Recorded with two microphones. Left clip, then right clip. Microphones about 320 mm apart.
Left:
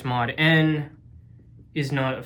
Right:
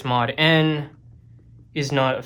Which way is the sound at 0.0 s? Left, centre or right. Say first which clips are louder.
Right 3 dB; centre.